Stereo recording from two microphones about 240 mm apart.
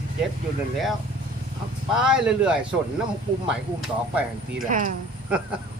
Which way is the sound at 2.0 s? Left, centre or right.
Centre.